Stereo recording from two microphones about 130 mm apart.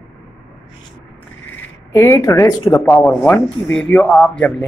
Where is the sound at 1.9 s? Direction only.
20° left (ahead or behind).